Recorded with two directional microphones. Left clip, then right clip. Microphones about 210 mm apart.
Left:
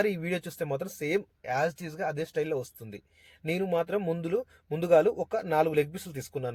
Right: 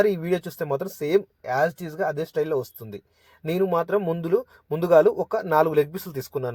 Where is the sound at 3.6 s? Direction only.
40° right (ahead or behind).